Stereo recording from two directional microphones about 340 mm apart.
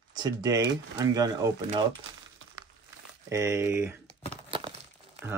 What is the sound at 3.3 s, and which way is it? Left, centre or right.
Speech, centre.